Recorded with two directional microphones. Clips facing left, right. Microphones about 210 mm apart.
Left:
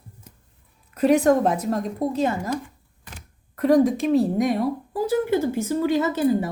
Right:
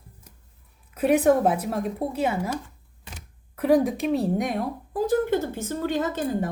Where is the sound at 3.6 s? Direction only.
Centre (ahead or behind).